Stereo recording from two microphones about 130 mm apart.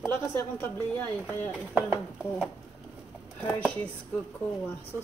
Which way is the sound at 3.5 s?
10° left (ahead or behind).